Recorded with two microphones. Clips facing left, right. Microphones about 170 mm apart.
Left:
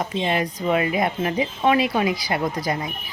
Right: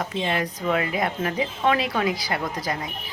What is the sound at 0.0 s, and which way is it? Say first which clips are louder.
Speech: left 3 dB; 20° left (ahead or behind).